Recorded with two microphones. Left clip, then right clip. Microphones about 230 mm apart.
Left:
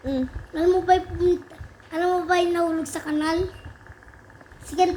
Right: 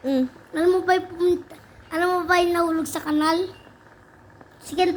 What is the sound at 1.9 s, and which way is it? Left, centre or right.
A woman's voice, right.